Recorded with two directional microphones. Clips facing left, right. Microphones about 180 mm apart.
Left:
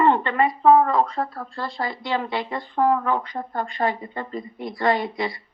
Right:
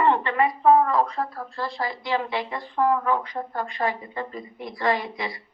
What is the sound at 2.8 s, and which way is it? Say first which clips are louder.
Speech: left 1 dB; 25° left (ahead or behind).